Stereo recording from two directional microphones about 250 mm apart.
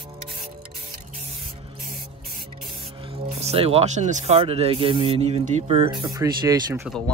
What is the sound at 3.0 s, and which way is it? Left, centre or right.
Speech, right.